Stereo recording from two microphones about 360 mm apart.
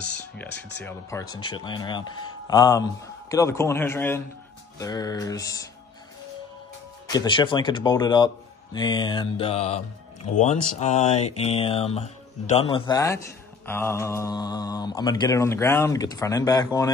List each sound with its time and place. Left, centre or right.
0.1 s speech: centre
7.1 s speech: centre